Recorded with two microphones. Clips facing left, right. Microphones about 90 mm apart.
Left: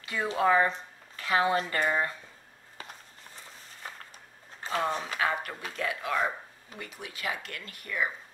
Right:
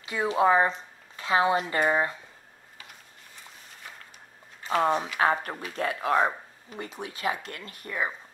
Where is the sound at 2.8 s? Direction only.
35° left (ahead or behind).